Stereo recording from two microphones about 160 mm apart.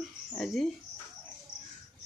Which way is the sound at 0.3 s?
5° left (ahead or behind).